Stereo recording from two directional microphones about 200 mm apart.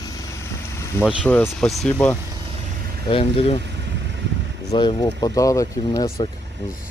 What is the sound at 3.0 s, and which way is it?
Speech, 25° left (ahead or behind).